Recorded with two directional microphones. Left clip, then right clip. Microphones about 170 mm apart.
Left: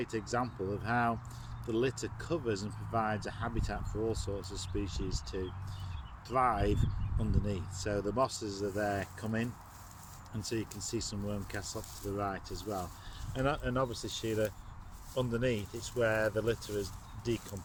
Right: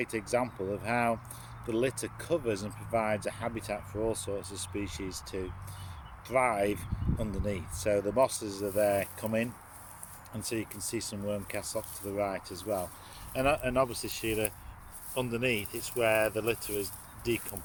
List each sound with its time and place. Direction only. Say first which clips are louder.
0.0 s speech: right 4 dB; 15° right (ahead or behind)